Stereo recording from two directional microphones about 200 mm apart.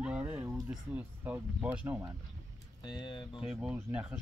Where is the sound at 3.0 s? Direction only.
25° left (ahead or behind).